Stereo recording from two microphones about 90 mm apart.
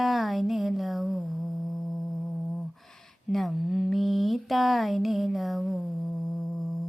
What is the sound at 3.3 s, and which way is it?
A woman's voice, centre (ahead or behind).